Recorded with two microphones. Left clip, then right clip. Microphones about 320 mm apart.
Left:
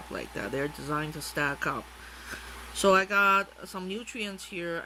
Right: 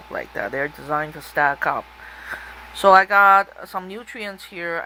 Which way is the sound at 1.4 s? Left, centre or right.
Centre.